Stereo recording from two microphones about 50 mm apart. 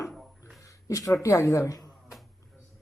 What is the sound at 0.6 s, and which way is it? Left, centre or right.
Speech, left.